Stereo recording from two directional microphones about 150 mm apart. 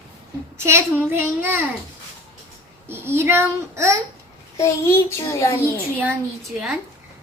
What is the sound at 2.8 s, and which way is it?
Speech, 15° right (ahead or behind).